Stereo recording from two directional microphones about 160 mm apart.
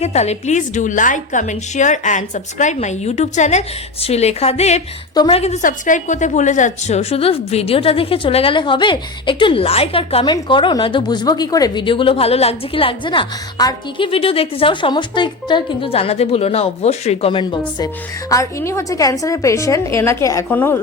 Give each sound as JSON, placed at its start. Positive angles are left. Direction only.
{"t": 0.0, "sound": "a woman's voice", "side_deg": 45}
{"t": 5.1, "sound": "a woman's voice", "side_deg": 30}
{"t": 5.4, "sound": "a woman's voice", "side_deg": 50}
{"t": 18.3, "sound": "a woman's voice", "side_deg": 20}